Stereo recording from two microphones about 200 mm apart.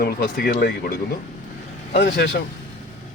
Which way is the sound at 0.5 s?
60° left (ahead or behind).